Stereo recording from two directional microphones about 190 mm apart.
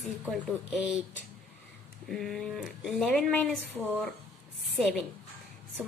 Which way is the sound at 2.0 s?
Centre (ahead or behind).